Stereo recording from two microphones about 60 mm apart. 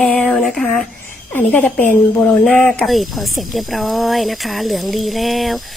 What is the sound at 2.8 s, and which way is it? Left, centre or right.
Speech, centre.